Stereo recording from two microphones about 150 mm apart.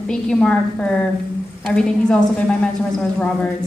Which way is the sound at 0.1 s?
5° left (ahead or behind).